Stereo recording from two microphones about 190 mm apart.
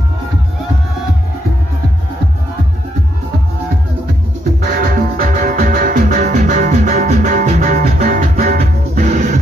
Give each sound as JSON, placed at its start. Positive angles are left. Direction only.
{"t": 4.8, "sound": "music", "side_deg": -45}